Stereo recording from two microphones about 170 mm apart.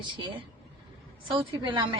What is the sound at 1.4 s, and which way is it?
Speech, 30° right (ahead or behind).